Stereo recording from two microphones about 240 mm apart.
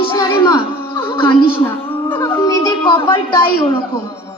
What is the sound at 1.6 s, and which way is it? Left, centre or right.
Music, centre.